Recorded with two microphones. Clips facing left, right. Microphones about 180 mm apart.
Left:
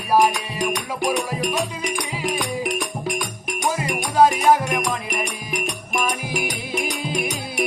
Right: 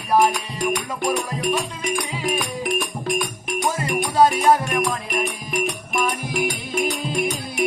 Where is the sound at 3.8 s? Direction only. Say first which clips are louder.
Even; 10° left (ahead or behind).